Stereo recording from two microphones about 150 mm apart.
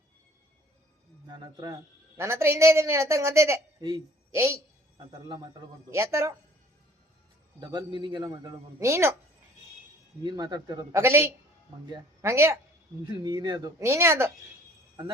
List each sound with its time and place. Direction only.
1.3 s a man's voice: 25° right (ahead or behind)
4.3 s a man's voice: 20° right (ahead or behind)
5.3 s a man's voice: 30° right (ahead or behind)
5.9 s a man's voice: 20° right (ahead or behind)
7.7 s a man's voice: 30° right (ahead or behind)
10.2 s a man's voice: 25° right (ahead or behind)
13.2 s a man's voice: 30° right (ahead or behind)